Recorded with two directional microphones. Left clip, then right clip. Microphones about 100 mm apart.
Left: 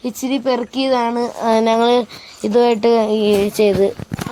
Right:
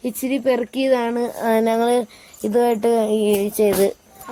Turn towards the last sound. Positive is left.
turn(degrees=35)  # may be behind; listen again after turning